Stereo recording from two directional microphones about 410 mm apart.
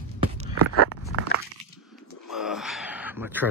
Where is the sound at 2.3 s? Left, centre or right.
Centre.